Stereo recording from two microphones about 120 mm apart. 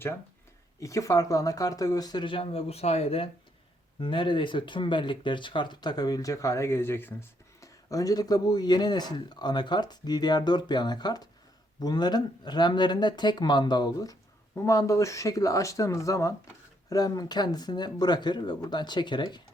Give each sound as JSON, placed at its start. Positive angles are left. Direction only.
{"t": 0.8, "sound": "speech", "side_deg": 25}
{"t": 4.0, "sound": "speech", "side_deg": 45}